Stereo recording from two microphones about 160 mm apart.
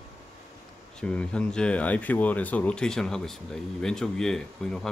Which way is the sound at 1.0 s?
5° left (ahead or behind).